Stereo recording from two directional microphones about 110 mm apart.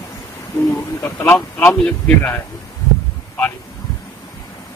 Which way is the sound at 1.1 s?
20° left (ahead or behind).